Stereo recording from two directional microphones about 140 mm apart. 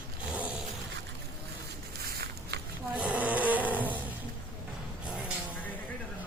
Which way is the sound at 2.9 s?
10° right (ahead or behind).